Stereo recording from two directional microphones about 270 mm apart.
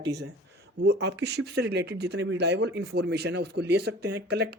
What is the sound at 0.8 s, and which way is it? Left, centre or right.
Speech, right.